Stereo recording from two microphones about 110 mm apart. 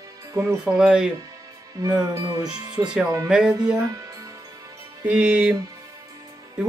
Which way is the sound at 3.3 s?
10° right (ahead or behind).